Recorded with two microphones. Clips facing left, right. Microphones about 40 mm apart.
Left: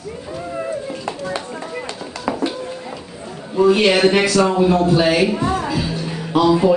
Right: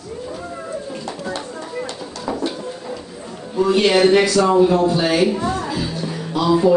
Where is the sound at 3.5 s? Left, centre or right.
Centre.